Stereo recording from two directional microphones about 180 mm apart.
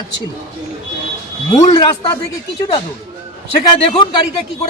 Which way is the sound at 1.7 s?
30° left (ahead or behind).